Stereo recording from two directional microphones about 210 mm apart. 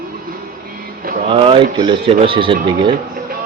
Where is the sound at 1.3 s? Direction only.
25° right (ahead or behind).